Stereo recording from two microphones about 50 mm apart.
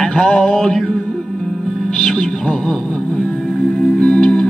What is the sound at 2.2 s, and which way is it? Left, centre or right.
Music, centre.